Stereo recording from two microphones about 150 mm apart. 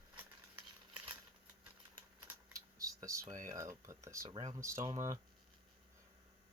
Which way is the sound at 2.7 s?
20° right (ahead or behind).